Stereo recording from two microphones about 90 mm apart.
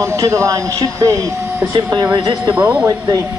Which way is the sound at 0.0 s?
35° right (ahead or behind).